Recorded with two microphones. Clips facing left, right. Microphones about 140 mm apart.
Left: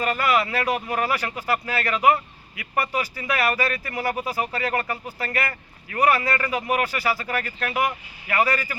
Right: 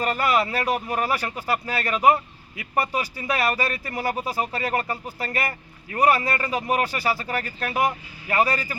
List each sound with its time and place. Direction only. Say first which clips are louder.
0.0 s speech: even; 30° right (ahead or behind)